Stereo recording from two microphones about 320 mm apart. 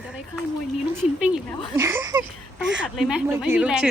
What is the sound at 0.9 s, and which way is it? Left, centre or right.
A woman's voice, centre.